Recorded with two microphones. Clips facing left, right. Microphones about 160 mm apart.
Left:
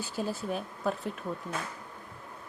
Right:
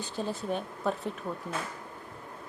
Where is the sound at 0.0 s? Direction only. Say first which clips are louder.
Even; 5° left (ahead or behind).